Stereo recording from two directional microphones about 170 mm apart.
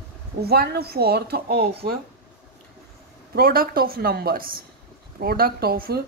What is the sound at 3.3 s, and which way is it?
A woman's voice, 60° right (ahead or behind).